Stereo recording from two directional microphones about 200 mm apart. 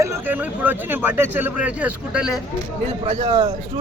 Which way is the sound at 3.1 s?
35° right (ahead or behind).